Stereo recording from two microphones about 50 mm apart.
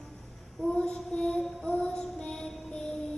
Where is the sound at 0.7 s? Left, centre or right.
Centre.